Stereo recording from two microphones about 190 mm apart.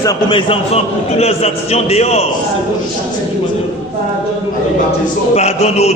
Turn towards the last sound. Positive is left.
turn(degrees=35)  # may be behind; listen again after turning